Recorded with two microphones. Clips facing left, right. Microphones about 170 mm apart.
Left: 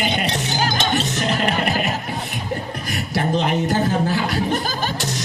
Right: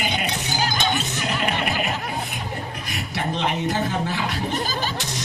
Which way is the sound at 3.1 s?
40° left (ahead or behind).